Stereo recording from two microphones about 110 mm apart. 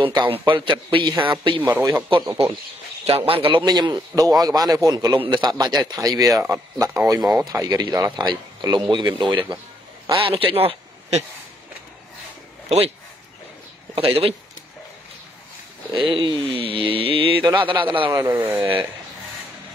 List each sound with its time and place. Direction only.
0.0 s a sound: 50° right (ahead or behind)
1.6 s speech: 15° right (ahead or behind)
3.1 s a man's voice: 60° right (ahead or behind)
3.6 s speech: 40° right (ahead or behind)
8.9 s a sound: 45° right (ahead or behind)
10.1 s speech: 55° right (ahead or behind)
12.6 s speech: 65° right (ahead or behind)
13.9 s a man's voice: 60° right (ahead or behind)
15.9 s a sound: 50° right (ahead or behind)
18.1 s speech: 20° right (ahead or behind)